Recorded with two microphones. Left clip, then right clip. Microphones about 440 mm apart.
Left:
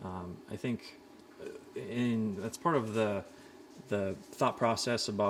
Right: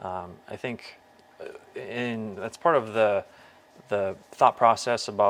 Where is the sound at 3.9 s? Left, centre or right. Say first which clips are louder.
Right 8 dB; right.